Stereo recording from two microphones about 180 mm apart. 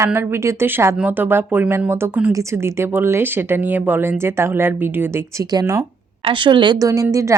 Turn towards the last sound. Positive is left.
turn(degrees=-15)  # may be behind; listen again after turning